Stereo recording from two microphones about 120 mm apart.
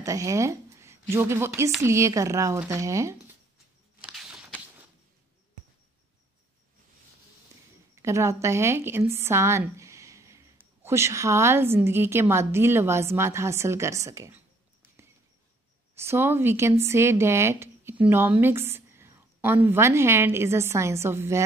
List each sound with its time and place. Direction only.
0.0 s a woman's voice: 25° right (ahead or behind)
4.0 s walk: 5° right (ahead or behind)
7.9 s a woman's voice: 25° right (ahead or behind)
15.9 s a woman's voice: 20° right (ahead or behind)